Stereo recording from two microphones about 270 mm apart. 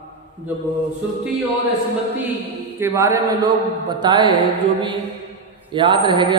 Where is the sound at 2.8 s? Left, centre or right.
Centre.